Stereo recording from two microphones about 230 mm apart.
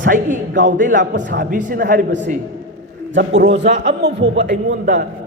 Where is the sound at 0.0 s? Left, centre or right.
Right.